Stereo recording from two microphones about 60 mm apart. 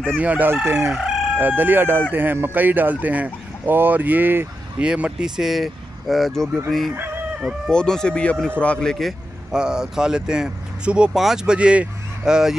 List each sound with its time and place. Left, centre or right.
0.2 s chicken: right
0.7 s speech: right
0.9 s chicken: centre
1.4 s speech: right
4.7 s speech: right; by 6.5 s centre
6.9 s chicken: right
7.7 s a man's voice: centre
8.8 s speech: centre
9.5 s speech: centre